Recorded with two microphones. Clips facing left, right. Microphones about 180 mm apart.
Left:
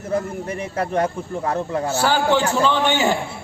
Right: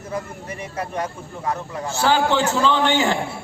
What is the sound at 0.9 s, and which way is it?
Speech, 55° left (ahead or behind).